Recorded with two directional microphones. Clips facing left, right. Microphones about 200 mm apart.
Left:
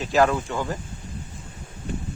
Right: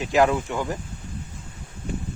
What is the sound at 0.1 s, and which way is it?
Speech, 15° right (ahead or behind).